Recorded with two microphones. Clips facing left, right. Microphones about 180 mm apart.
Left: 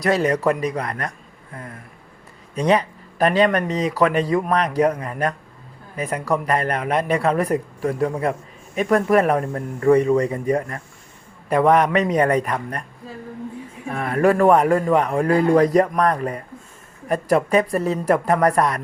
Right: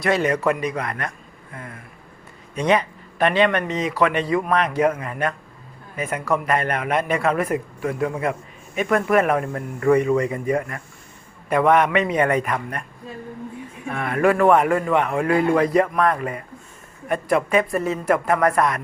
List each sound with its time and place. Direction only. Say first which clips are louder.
0.0 s a man's voice: left 1 dB; 35° left (ahead or behind)
1.5 s vehicle: left 1 dB; 40° left (ahead or behind)
2.6 s a man's voice: left 1 dB; 35° left (ahead or behind)
13.8 s a man's voice: left 1 dB; 35° left (ahead or behind)